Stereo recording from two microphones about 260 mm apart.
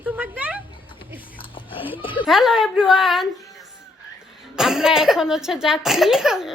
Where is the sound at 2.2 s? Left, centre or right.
Centre.